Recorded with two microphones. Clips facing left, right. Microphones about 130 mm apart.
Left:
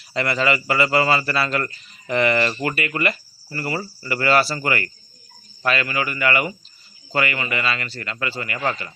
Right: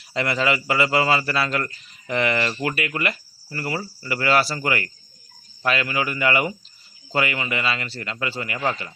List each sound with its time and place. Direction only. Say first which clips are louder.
0.1 s a man's voice: left 1 dB; 10° right (ahead or behind)